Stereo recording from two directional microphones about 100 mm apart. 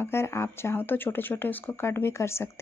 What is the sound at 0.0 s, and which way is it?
Speech, 25° left (ahead or behind).